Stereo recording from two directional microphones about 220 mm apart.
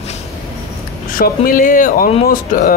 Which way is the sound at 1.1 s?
40° left (ahead or behind).